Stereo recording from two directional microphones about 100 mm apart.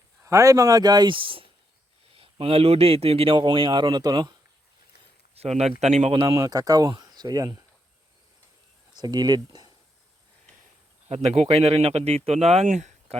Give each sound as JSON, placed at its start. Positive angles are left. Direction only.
{"t": 0.2, "sound": "speech", "side_deg": -30}
{"t": 2.1, "sound": "a man's voice", "side_deg": -70}
{"t": 3.3, "sound": "speech", "side_deg": -55}
{"t": 5.3, "sound": "speech", "side_deg": -90}
{"t": 6.2, "sound": "speech", "side_deg": -40}
{"t": 8.9, "sound": "speech", "side_deg": -45}
{"t": 11.1, "sound": "speech", "side_deg": -90}